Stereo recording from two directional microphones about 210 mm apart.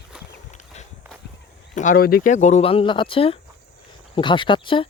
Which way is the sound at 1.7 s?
40° left (ahead or behind).